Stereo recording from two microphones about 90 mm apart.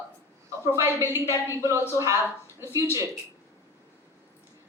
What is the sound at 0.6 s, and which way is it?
A woman's voice, 25° right (ahead or behind).